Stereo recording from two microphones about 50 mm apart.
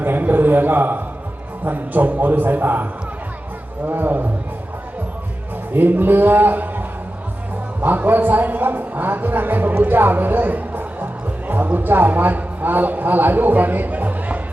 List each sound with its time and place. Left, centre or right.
0.0 s a sound: right
1.6 s a man's voice: right
5.7 s a man's voice: right